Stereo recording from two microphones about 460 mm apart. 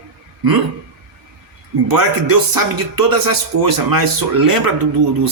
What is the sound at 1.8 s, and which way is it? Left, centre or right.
Speech, right.